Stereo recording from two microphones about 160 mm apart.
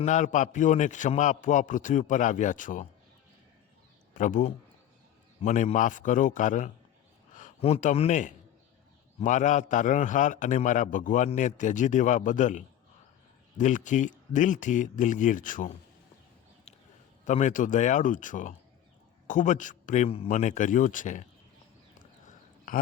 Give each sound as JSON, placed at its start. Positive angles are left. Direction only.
{"t": 0.0, "sound": "a man's voice", "side_deg": 50}
{"t": 4.1, "sound": "a man's voice", "side_deg": 55}
{"t": 17.2, "sound": "a man's voice", "side_deg": 50}
{"t": 21.9, "sound": "a sound", "side_deg": 55}